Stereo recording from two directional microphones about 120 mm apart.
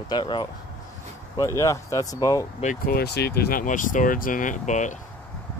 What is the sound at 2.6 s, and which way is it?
Speech, 70° left (ahead or behind).